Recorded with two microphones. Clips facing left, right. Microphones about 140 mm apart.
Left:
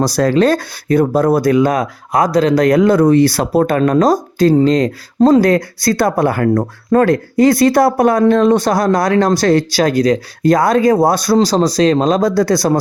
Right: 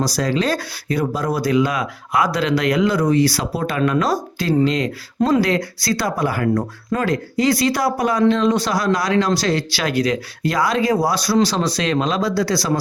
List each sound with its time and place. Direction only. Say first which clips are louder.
0.0 s speech: left 8 dB; 55° left (ahead or behind)
11.3 s speech: left 5 dB; 40° left (ahead or behind)